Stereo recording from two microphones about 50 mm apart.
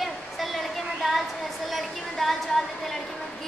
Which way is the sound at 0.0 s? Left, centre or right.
Centre.